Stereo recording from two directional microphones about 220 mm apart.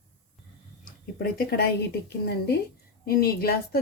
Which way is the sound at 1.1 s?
45° left (ahead or behind).